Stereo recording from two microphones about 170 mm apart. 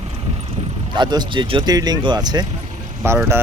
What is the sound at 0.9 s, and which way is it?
Speech, 25° right (ahead or behind).